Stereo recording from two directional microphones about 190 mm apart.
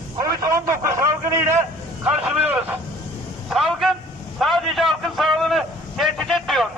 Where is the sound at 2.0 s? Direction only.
5° right (ahead or behind).